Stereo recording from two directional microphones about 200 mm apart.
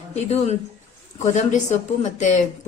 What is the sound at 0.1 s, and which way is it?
Speech, 35° left (ahead or behind).